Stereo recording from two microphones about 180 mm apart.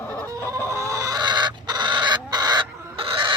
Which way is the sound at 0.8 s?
15° right (ahead or behind).